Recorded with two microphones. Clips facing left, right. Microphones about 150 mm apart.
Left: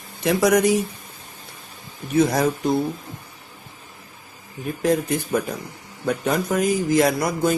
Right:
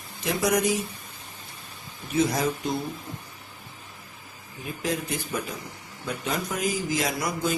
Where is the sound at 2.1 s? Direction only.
55° left (ahead or behind).